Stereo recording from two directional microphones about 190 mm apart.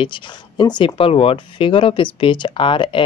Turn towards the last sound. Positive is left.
turn(degrees=25)  # may be behind; listen again after turning